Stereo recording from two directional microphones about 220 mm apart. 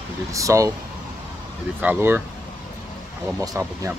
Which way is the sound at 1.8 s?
10° right (ahead or behind).